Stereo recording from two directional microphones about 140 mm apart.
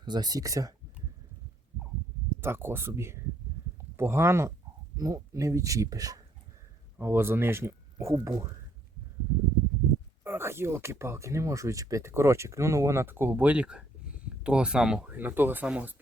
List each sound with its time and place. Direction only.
0.0 s speech: 30° right (ahead or behind)
2.4 s speech: 15° right (ahead or behind)
10.2 s speech: 15° right (ahead or behind)